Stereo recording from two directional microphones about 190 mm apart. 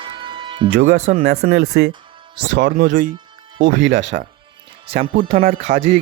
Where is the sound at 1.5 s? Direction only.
75° right (ahead or behind).